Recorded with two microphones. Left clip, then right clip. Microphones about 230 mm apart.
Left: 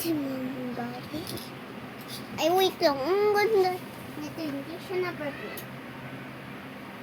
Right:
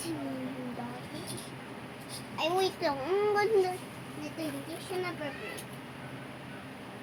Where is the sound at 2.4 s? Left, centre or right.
Left.